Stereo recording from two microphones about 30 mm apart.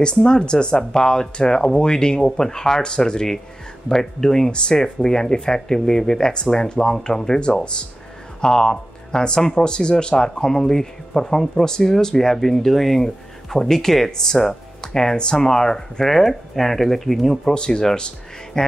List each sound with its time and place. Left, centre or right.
0.0 s speech: left
4.5 s speech: left
4.7 s speech: left
8.4 s speech: left; by 17.4 s centre
17.5 s speech: left
17.9 s music: left